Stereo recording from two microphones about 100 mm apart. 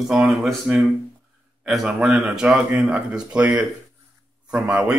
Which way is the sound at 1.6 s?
Centre (ahead or behind).